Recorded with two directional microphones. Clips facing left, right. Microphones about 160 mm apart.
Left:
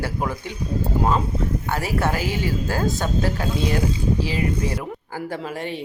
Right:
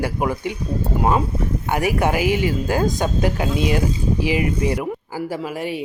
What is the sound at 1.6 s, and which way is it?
Speech, 15° right (ahead or behind).